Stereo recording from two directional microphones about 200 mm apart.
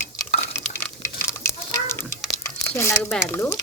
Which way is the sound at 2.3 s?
15° left (ahead or behind).